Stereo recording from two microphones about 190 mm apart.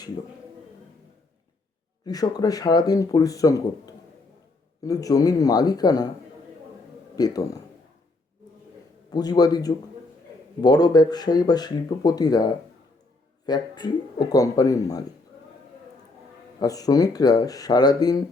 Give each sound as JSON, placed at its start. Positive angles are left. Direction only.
{"t": 2.0, "sound": "speech", "side_deg": 20}
{"t": 7.2, "sound": "speech", "side_deg": 20}
{"t": 9.0, "sound": "speech", "side_deg": 20}
{"t": 16.6, "sound": "speech", "side_deg": 20}